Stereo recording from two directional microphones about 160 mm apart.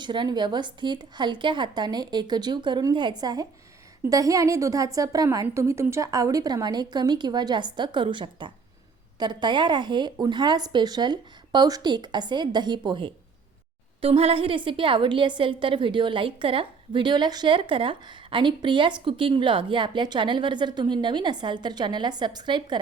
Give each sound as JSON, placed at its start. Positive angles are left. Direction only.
{"t": 0.0, "sound": "a woman's voice", "side_deg": -30}